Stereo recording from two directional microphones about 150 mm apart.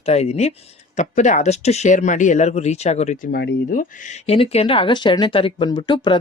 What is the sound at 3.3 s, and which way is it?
Speech, 75° left (ahead or behind).